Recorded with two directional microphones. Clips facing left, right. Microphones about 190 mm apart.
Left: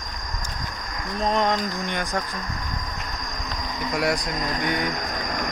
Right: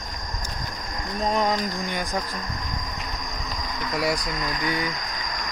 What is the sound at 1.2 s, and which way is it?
Cricket, 5° right (ahead or behind).